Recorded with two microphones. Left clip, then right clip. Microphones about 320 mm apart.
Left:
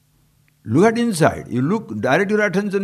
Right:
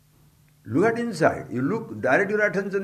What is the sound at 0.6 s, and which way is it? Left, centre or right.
A man's voice, left.